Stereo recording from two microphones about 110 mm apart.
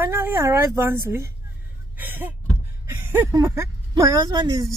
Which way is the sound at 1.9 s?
15° right (ahead or behind).